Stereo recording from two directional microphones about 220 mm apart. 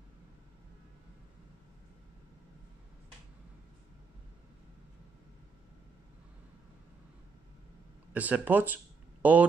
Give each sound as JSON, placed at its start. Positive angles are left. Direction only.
{"t": 8.1, "sound": "speech", "side_deg": -5}